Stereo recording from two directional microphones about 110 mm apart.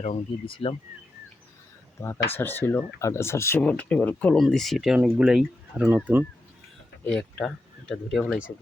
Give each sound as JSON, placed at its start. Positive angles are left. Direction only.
{"t": 0.4, "sound": "speech", "side_deg": 55}
{"t": 2.0, "sound": "speech", "side_deg": 20}
{"t": 3.6, "sound": "speech", "side_deg": 10}
{"t": 4.9, "sound": "speech", "side_deg": -10}
{"t": 7.0, "sound": "speech", "side_deg": 10}